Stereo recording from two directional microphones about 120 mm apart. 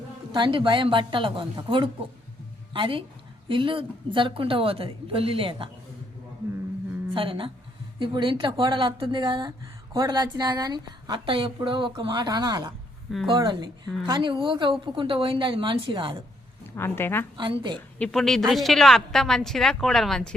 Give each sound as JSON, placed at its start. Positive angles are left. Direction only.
{"t": 0.3, "sound": "a woman's voice", "side_deg": -45}
{"t": 7.1, "sound": "a woman's voice", "side_deg": -45}
{"t": 11.3, "sound": "a woman's voice", "side_deg": -45}
{"t": 16.7, "sound": "speech", "side_deg": 20}
{"t": 17.3, "sound": "a woman's voice", "side_deg": -45}
{"t": 18.0, "sound": "speech", "side_deg": 5}